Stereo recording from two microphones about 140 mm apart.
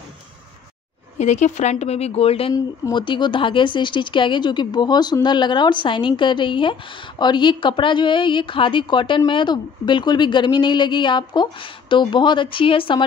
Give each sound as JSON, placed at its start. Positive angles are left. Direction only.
{"t": 1.1, "sound": "speech", "side_deg": 60}
{"t": 2.5, "sound": "speech", "side_deg": 30}